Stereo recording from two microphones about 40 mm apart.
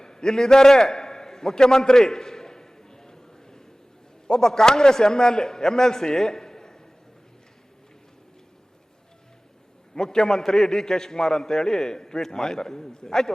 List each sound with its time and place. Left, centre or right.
0.0 s a sound: centre
4.3 s a man's voice: centre
9.9 s a man's voice: centre